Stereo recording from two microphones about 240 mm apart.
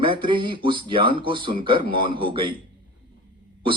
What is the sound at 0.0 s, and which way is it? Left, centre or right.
Speech, right.